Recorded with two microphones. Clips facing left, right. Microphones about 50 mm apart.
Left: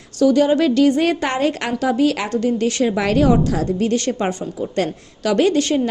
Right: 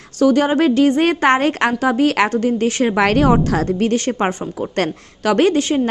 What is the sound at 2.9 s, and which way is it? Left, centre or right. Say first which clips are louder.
Speech: right 2 dB; right.